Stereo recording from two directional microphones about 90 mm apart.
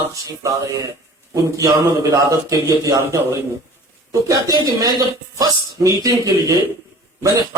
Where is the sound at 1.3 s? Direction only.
40° right (ahead or behind).